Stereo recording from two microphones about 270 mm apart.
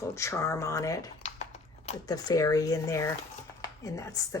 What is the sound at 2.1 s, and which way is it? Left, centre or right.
Speech, centre.